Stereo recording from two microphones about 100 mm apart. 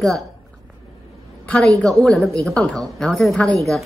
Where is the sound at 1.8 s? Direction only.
5° left (ahead or behind).